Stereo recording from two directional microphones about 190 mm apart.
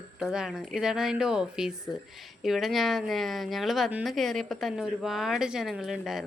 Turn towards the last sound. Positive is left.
turn(degrees=0)  # may be behind; listen again after turning